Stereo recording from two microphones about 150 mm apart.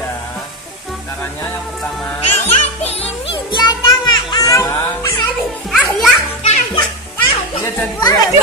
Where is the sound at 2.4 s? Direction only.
45° left (ahead or behind); by 4.7 s 25° left (ahead or behind).